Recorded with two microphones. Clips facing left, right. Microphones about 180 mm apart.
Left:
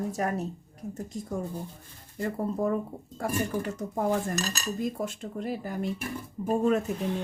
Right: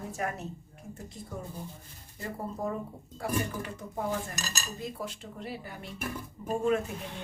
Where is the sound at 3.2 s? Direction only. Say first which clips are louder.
Left 3 dB; 45° left (ahead or behind).